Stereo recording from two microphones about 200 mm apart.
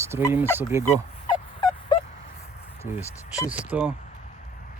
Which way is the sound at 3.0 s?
15° left (ahead or behind).